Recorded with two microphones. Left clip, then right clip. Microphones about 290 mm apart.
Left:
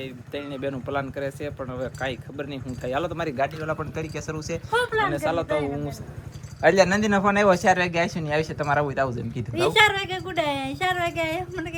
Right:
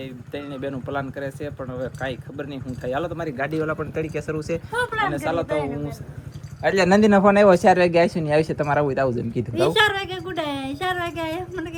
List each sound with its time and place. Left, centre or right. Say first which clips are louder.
0.0 s speech: even; centre
3.2 s a man's voice: left 1 dB; centre
3.6 s speech: right 4 dB; centre